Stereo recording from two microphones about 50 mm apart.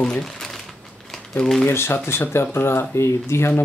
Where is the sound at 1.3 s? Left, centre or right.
Centre.